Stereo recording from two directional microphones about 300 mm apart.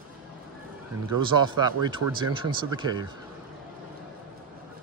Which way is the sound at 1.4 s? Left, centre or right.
Centre.